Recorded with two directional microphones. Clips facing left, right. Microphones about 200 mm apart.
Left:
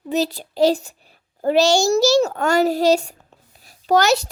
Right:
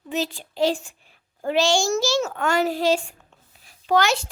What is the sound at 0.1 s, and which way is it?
A child's voice, 40° left (ahead or behind).